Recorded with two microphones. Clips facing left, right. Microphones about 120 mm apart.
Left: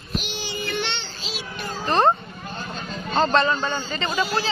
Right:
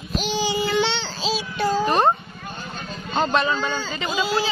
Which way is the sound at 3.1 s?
10° right (ahead or behind).